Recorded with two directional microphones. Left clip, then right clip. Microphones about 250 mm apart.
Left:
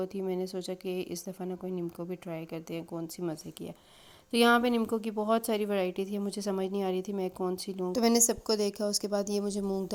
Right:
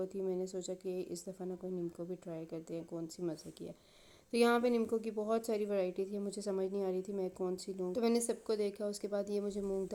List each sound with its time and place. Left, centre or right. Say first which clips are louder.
0.0 s a woman's voice: left 4 dB; left